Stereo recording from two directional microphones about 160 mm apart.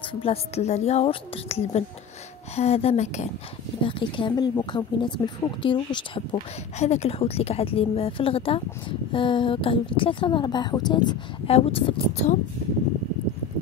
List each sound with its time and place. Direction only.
0.1 s a woman's voice: 35° left (ahead or behind)
3.8 s a woman's voice: 30° left (ahead or behind)
6.8 s a woman's voice: 45° left (ahead or behind); by 11.1 s 25° left (ahead or behind)
11.4 s a woman's voice: 40° left (ahead or behind)